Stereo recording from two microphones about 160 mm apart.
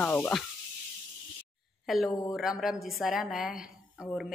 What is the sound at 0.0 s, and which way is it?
Speech, 10° left (ahead or behind).